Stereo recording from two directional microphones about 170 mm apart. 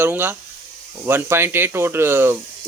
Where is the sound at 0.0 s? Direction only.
10° right (ahead or behind).